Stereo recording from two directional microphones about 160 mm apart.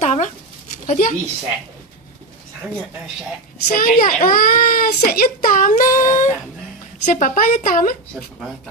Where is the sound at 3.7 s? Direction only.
65° left (ahead or behind).